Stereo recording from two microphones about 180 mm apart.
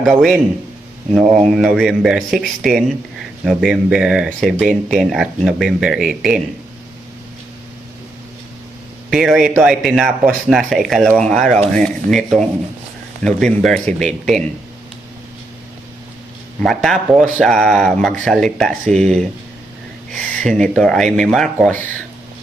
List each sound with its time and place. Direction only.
0.0 s speech: centre (ahead or behind)
9.0 s speech: centre (ahead or behind)
11.4 s speech: 40° right (ahead or behind)
11.7 s speech: centre (ahead or behind)
16.6 s speech: centre (ahead or behind)